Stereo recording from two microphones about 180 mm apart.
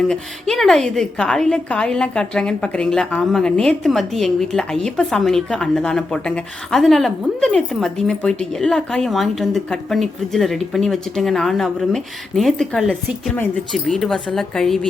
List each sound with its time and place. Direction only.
0.1 s a woman's voice: centre (ahead or behind)